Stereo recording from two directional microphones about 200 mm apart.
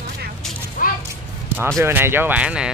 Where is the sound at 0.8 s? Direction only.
45° left (ahead or behind).